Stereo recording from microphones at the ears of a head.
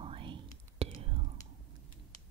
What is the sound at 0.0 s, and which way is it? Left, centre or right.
Whispering, right.